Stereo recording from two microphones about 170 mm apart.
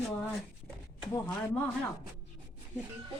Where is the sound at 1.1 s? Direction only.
10° left (ahead or behind).